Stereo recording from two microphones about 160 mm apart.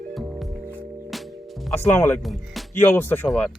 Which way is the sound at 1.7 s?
15° left (ahead or behind).